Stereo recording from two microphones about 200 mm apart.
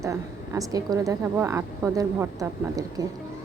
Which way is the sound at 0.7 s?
15° right (ahead or behind).